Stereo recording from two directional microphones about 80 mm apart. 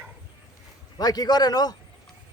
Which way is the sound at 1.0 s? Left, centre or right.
Left.